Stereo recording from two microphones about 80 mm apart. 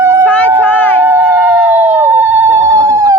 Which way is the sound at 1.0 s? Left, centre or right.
Right.